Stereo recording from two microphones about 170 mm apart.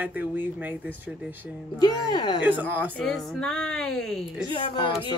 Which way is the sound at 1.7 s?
25° left (ahead or behind).